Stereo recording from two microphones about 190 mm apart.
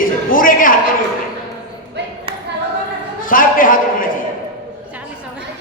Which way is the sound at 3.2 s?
45° left (ahead or behind).